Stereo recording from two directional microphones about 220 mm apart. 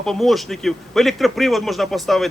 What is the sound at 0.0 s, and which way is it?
A man's voice, centre (ahead or behind).